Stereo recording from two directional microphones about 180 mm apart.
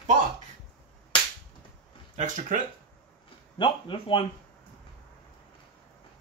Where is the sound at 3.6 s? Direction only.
30° left (ahead or behind).